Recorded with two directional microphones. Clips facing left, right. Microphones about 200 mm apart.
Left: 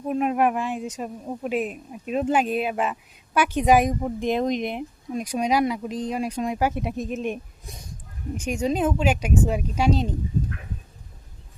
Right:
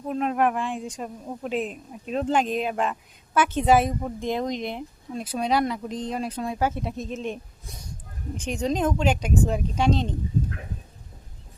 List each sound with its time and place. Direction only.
0.1 s a woman's voice: 10° left (ahead or behind)